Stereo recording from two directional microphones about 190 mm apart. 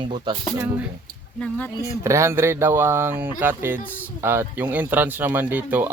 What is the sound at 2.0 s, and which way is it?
Speech, 15° right (ahead or behind).